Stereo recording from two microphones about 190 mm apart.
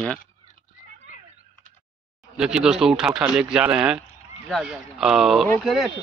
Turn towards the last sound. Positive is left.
turn(degrees=0)  # may be behind; listen again after turning